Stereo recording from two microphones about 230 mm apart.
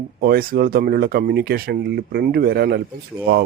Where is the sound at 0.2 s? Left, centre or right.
Right.